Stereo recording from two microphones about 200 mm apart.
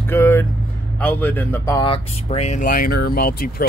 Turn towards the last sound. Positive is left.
turn(degrees=50)  # may be behind; listen again after turning